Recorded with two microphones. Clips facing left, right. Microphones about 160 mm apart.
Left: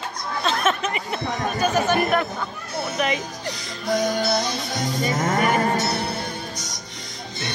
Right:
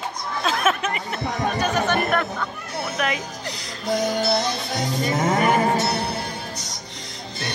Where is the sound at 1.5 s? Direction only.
5° left (ahead or behind).